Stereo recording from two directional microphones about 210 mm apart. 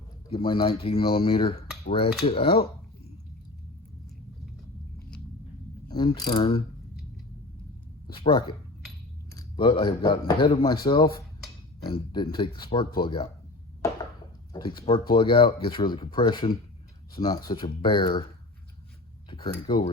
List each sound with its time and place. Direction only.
0.3 s speech: 25° left (ahead or behind)
5.9 s speech: 20° left (ahead or behind)
8.0 s speech: 25° left (ahead or behind)
14.5 s speech: 20° left (ahead or behind)
19.6 s speech: 20° left (ahead or behind)